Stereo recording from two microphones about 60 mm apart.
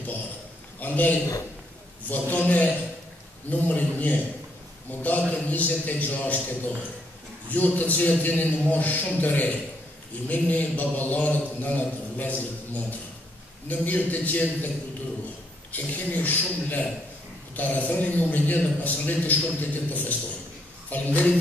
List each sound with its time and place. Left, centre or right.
0.7 s a man's voice: left
7.4 s a man's voice: left
15.7 s a man's voice: left